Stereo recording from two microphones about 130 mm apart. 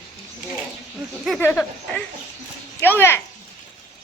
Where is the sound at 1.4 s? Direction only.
10° left (ahead or behind).